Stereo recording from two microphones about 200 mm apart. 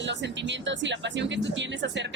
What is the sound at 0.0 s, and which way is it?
Speech, 65° right (ahead or behind).